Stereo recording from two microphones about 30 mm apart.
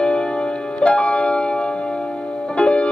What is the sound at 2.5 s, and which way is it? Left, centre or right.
Music, left.